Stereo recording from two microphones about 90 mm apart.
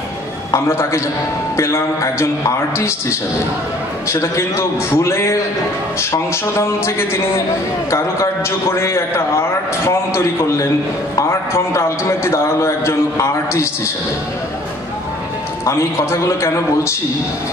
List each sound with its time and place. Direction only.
0.5 s a man's voice: 30° left (ahead or behind)
6.6 s a man's voice: 30° left (ahead or behind)
15.6 s a man's voice: 35° left (ahead or behind)